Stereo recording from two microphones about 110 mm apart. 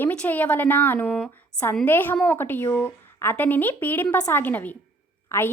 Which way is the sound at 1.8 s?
20° left (ahead or behind).